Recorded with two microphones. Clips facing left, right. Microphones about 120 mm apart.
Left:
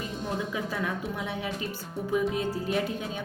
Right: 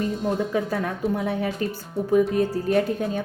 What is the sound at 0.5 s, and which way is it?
Speech, 45° right (ahead or behind).